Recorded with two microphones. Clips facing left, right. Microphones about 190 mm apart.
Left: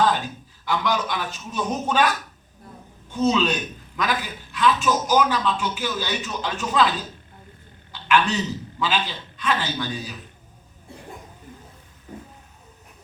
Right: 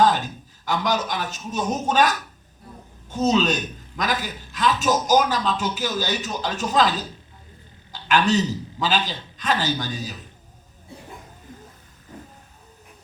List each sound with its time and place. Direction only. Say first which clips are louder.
0.6 s a man's voice: even; 40° right (ahead or behind)
7.9 s a man's voice: right 2 dB; 40° right (ahead or behind)